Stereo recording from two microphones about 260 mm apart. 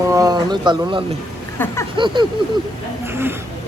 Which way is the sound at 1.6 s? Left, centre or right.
Centre.